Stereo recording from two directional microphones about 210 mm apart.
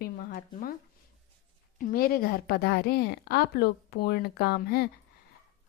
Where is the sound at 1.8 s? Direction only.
45° left (ahead or behind).